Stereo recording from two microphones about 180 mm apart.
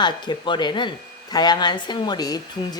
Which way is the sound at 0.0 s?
25° left (ahead or behind).